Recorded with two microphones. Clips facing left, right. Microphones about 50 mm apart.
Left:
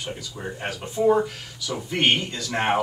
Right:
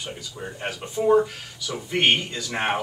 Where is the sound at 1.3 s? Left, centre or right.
Centre.